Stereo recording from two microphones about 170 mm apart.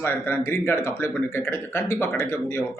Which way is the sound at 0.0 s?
15° left (ahead or behind).